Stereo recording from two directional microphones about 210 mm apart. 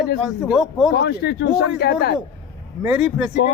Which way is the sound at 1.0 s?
50° left (ahead or behind).